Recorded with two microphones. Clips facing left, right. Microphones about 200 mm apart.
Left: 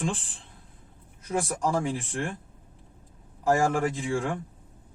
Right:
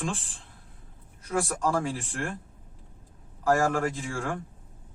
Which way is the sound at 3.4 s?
15° left (ahead or behind).